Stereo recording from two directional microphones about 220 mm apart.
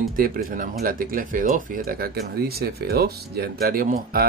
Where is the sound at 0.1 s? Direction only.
40° right (ahead or behind).